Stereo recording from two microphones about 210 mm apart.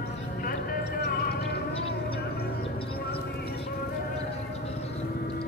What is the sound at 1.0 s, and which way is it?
Music, 50° left (ahead or behind).